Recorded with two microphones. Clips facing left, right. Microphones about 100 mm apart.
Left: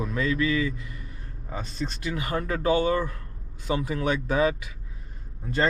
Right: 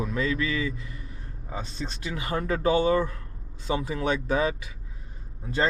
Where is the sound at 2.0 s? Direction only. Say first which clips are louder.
Even; 35° right (ahead or behind).